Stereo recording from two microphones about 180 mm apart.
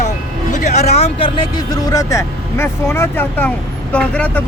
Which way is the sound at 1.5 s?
20° left (ahead or behind).